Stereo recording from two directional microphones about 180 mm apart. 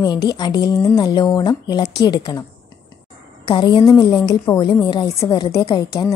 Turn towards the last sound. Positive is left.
turn(degrees=25)  # may be behind; listen again after turning